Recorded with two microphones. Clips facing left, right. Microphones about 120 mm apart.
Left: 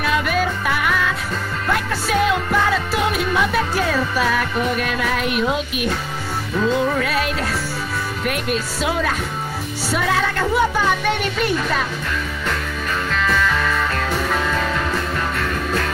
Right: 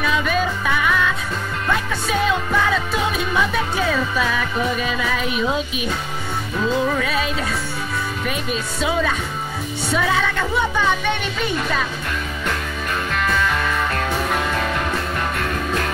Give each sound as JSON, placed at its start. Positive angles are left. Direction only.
{"t": 0.0, "sound": "music", "side_deg": 5}
{"t": 6.6, "sound": "music", "side_deg": 0}
{"t": 9.8, "sound": "speech", "side_deg": 0}
{"t": 13.3, "sound": "music", "side_deg": -20}
{"t": 14.1, "sound": "music", "side_deg": -10}